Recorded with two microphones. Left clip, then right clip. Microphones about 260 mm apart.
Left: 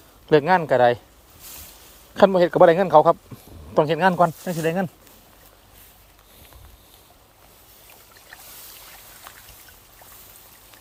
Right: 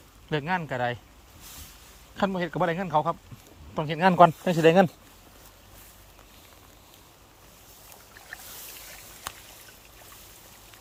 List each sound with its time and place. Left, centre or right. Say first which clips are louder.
0.3 s a man's voice: left 12 dB; centre
2.1 s a man's voice: left 13 dB; centre
4.0 s speech: right 3 dB; centre
4.4 s speech: right 5 dB; centre